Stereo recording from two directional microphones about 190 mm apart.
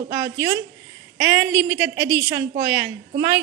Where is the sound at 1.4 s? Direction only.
10° right (ahead or behind).